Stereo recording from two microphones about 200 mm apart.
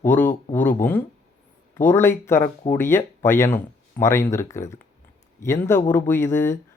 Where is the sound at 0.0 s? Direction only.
10° left (ahead or behind).